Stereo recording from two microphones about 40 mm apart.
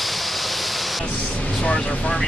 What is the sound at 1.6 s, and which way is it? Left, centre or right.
Vehicle, centre.